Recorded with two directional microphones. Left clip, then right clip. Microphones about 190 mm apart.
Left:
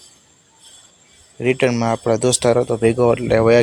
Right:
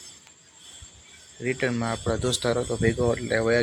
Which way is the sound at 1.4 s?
45° left (ahead or behind).